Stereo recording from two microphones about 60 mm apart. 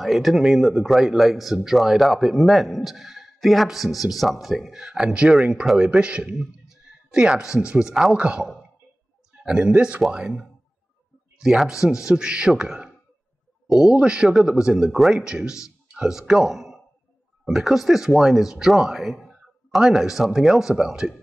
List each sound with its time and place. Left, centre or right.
0.0 s a man's voice: centre
11.3 s a man's voice: centre
15.1 s speech: centre